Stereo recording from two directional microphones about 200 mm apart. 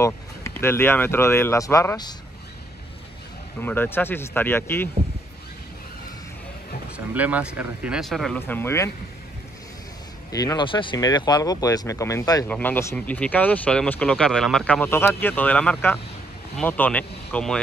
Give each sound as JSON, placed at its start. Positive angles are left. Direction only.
{"t": 0.0, "sound": "speech", "side_deg": 15}
{"t": 3.6, "sound": "speech", "side_deg": 10}
{"t": 7.2, "sound": "speech", "side_deg": -10}
{"t": 10.3, "sound": "speech", "side_deg": 20}